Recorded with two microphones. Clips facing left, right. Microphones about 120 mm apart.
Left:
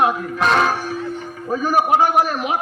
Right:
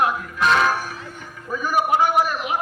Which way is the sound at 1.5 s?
35° left (ahead or behind).